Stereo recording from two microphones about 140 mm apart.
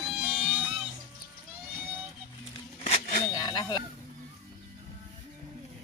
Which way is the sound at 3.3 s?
30° left (ahead or behind).